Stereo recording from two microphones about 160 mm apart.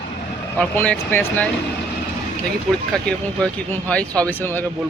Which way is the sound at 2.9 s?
5° left (ahead or behind).